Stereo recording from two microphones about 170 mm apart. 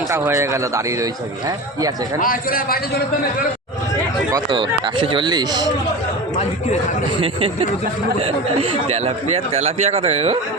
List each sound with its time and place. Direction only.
0.1 s a man's voice: 15° right (ahead or behind)
2.2 s a man's voice: 55° left (ahead or behind)
4.3 s speech: 25° right (ahead or behind)
7.2 s speech: 35° right (ahead or behind)
8.7 s speech: 35° right (ahead or behind)